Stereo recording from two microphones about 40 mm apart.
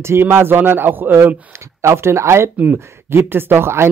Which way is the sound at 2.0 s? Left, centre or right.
Right.